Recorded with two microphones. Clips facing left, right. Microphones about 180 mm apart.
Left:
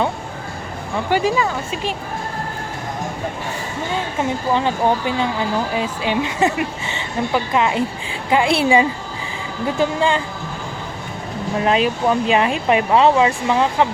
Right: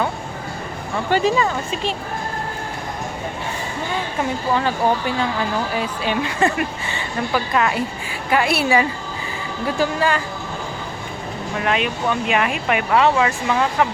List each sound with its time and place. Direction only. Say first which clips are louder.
1.1 s speech: even; 10° left (ahead or behind)
4.5 s speech: left 1 dB; 20° left (ahead or behind)
11.6 s speech: left 4 dB; 30° left (ahead or behind)